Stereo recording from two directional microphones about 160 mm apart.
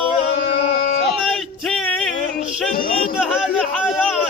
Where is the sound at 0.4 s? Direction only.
50° left (ahead or behind).